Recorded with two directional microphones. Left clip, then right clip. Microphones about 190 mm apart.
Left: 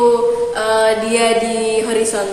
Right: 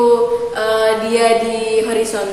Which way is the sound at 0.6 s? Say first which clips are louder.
Left 1 dB; 15° left (ahead or behind).